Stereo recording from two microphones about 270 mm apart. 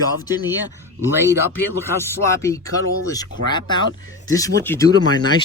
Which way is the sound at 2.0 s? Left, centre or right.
Centre.